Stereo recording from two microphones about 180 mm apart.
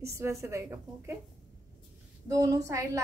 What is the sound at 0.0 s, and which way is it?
A woman's voice, 15° right (ahead or behind).